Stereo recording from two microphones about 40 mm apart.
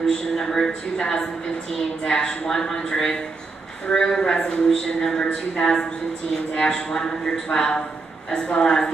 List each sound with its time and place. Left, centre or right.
0.0 s a woman's voice: centre